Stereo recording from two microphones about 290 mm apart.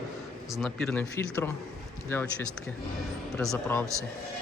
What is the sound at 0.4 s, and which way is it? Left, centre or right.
Speech, centre.